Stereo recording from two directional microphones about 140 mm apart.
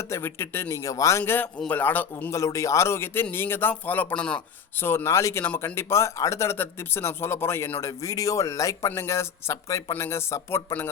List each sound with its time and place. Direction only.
0.1 s speech: 20° left (ahead or behind)